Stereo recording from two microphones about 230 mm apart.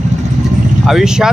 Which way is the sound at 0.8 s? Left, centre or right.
Centre.